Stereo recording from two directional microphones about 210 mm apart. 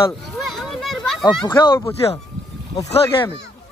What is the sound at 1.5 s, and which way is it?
Speech, 15° left (ahead or behind).